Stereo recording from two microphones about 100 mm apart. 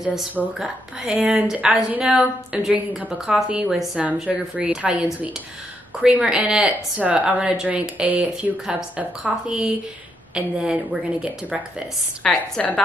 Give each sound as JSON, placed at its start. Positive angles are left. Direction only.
{"t": 0.6, "sound": "speech", "side_deg": -10}
{"t": 12.2, "sound": "a woman's voice", "side_deg": 10}